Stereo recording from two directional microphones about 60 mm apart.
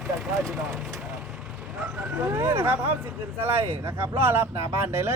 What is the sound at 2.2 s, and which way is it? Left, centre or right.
Speech, right.